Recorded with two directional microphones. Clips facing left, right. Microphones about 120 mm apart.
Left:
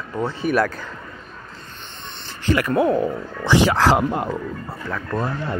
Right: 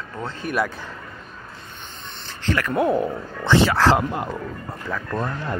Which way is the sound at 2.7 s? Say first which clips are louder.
Left 1 dB; 5° right (ahead or behind).